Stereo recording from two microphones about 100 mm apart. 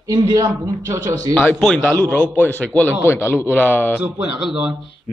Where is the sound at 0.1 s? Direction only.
35° right (ahead or behind).